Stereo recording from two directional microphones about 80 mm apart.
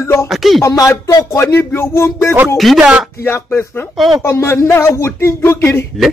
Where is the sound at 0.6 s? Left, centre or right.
Left.